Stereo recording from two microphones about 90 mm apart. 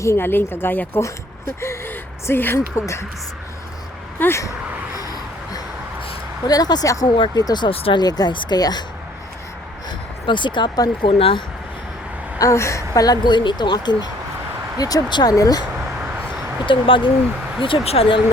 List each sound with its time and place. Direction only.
0.0 s speech: 30° left (ahead or behind)
4.2 s speech: 30° left (ahead or behind)
4.9 s a sound: 45° left (ahead or behind)
6.5 s speech: 45° left (ahead or behind)
7.7 s speech: 90° left
7.9 s speech: 50° left (ahead or behind)
10.2 s speech: 60° left (ahead or behind)
12.4 s speech: 35° left (ahead or behind)
16.6 s speech: 70° left (ahead or behind)
17.9 s speech: 90° left